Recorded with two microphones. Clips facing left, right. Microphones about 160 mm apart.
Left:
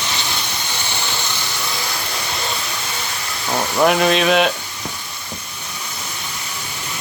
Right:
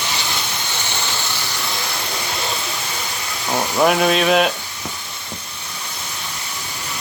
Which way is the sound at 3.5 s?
Centre (ahead or behind).